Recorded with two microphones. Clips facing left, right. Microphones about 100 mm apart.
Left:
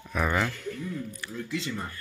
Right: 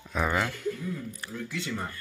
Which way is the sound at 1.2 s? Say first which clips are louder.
Even; 40° right (ahead or behind).